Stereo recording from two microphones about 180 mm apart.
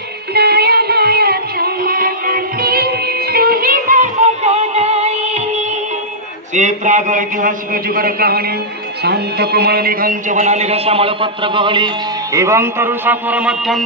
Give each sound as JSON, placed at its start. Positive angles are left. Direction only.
{"t": 0.3, "sound": "music", "side_deg": -60}
{"t": 6.5, "sound": "a man's voice", "side_deg": -40}
{"t": 9.0, "sound": "music", "side_deg": -65}
{"t": 10.3, "sound": "a man's voice", "side_deg": -40}
{"t": 12.4, "sound": "a man's voice", "side_deg": -15}